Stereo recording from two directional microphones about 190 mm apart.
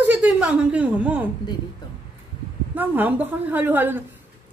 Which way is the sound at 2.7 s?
10° right (ahead or behind).